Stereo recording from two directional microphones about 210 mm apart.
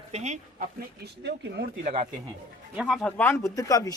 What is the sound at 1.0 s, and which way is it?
Speech, 50° right (ahead or behind).